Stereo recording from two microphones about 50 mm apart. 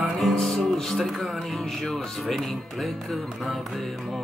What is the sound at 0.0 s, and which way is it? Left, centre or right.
Music, centre.